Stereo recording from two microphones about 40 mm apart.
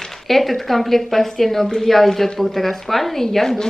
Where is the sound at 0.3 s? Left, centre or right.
Centre.